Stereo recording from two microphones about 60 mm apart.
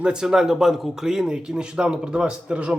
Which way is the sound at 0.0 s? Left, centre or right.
Centre.